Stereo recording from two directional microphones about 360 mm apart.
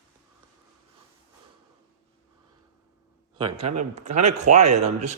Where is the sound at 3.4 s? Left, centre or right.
Right.